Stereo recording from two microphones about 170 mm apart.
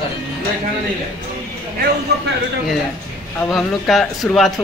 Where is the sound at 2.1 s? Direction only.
75° right (ahead or behind).